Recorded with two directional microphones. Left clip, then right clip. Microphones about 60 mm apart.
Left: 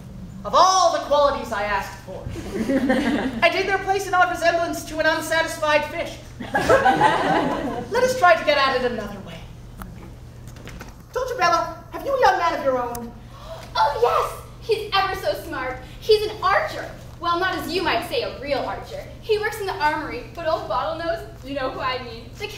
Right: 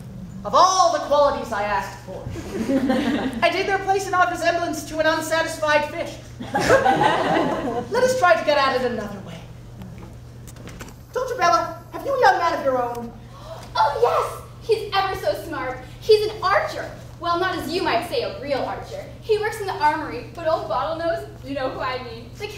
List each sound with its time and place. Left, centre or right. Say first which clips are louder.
0.4 s a woman's voice: even; centre
2.9 s a woman's voice: left 1 dB; left
3.3 s a woman's voice: left 1 dB; centre
6.8 s speech: left 1 dB; left
7.9 s a woman's voice: left 1 dB; centre
11.1 s a woman's voice: right 1 dB; centre